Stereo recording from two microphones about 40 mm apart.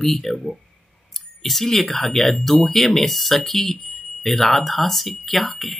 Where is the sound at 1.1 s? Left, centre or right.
Centre.